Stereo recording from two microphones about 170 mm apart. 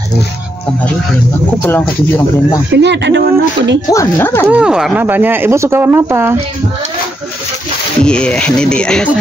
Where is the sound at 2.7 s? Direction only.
90° right.